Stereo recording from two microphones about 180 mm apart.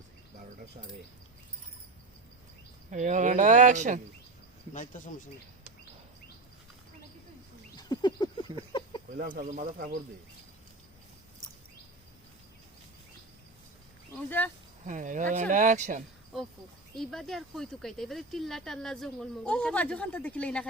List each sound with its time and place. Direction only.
2.9 s speech: 40° right (ahead or behind)
4.7 s speech: 45° left (ahead or behind)
7.8 s a sound: 20° left (ahead or behind)
9.1 s speech: 50° right (ahead or behind)
14.3 s speech: 10° left (ahead or behind)
14.8 s speech: 45° right (ahead or behind)
17.0 s speech: centre (ahead or behind)